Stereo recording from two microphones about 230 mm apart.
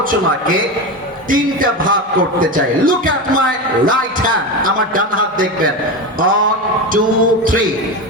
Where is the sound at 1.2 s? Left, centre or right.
Right.